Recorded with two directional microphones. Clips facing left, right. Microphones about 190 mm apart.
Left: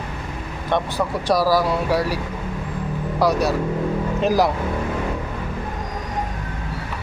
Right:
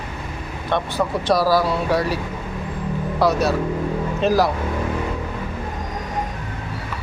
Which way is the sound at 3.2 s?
15° left (ahead or behind).